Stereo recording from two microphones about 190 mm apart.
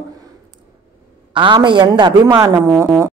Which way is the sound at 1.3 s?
25° right (ahead or behind).